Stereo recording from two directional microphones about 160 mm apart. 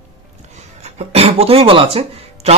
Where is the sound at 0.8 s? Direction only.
40° right (ahead or behind).